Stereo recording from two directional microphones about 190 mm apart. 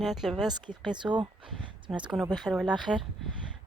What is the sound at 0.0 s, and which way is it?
Speech, centre (ahead or behind).